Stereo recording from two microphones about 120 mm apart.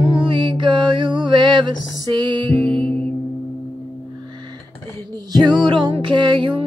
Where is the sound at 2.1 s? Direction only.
40° right (ahead or behind).